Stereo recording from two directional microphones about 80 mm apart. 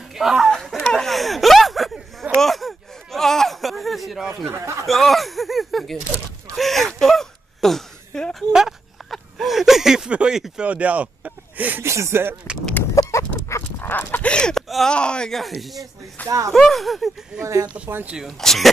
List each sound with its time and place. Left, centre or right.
0.1 s speech: centre
0.8 s a sound: centre
4.5 s speech: right
4.8 s speech: centre; by 11.8 s right
11.8 s speech: right
12.9 s dog: left
13.7 s speech: left; by 15.8 s centre
16.3 s speech: right
16.5 s speech: centre
17.4 s speech: right
18.2 s speech: centre